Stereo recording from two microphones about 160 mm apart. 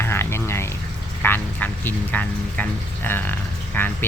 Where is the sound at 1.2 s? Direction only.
10° left (ahead or behind).